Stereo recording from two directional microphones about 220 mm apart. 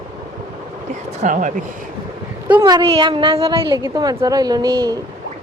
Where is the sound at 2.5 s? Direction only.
15° right (ahead or behind).